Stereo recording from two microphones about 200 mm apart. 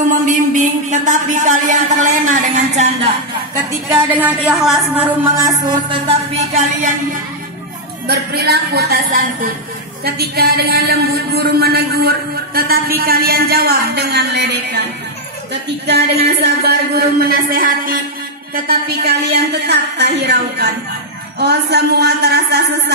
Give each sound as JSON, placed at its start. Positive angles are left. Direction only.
{"t": 0.3, "sound": "a sound", "side_deg": -40}
{"t": 3.9, "sound": "a woman's voice", "side_deg": -10}
{"t": 5.9, "sound": "music", "side_deg": -30}
{"t": 8.1, "sound": "a woman's voice", "side_deg": -55}
{"t": 15.9, "sound": "a woman's voice", "side_deg": -55}